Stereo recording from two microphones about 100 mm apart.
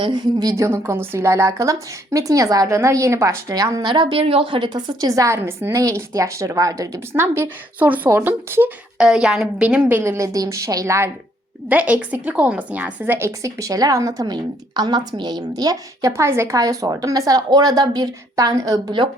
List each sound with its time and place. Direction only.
0.0 s a woman's voice: 45° right (ahead or behind)
0.5 s a woman's voice: 30° right (ahead or behind)
3.8 s a woman's voice: 50° right (ahead or behind)
4.2 s a woman's voice: 70° right (ahead or behind); by 8.7 s 20° right (ahead or behind)
9.0 s a woman's voice: 10° right (ahead or behind)
9.9 s a woman's voice: 30° right (ahead or behind)
11.7 s a woman's voice: 15° right (ahead or behind); by 19.0 s 45° right (ahead or behind)